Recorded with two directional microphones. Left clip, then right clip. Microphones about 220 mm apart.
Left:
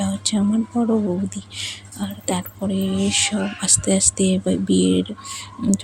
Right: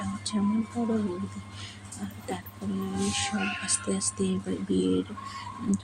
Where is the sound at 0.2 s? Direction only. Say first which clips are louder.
Left 10 dB; 35° left (ahead or behind).